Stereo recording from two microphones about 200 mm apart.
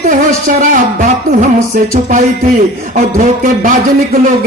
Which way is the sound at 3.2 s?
40° right (ahead or behind).